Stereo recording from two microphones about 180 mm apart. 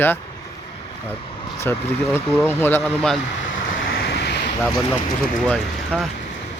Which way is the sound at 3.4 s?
90° left.